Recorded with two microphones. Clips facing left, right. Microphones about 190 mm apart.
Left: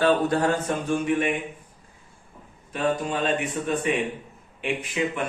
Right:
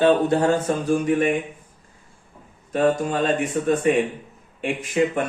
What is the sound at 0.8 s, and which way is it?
Speech, 40° right (ahead or behind).